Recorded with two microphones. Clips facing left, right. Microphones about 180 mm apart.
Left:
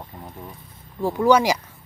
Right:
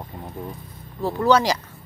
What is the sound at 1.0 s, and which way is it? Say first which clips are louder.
Speech: left 1 dB; 10° left (ahead or behind).